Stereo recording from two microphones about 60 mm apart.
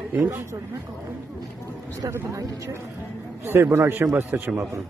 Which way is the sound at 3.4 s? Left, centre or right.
Right.